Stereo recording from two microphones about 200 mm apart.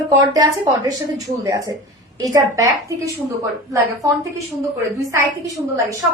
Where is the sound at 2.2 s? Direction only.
15° right (ahead or behind).